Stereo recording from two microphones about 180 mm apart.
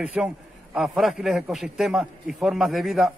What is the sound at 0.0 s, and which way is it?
A man's voice, 5° right (ahead or behind).